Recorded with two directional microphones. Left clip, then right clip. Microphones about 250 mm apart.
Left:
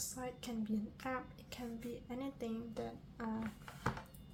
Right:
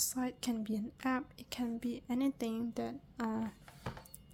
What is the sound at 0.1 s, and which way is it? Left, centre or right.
A woman's voice, right.